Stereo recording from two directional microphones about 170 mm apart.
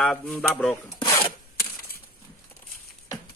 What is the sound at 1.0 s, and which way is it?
Rub, 25° left (ahead or behind).